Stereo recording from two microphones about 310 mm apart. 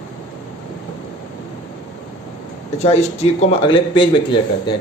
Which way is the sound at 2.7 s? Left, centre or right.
Centre.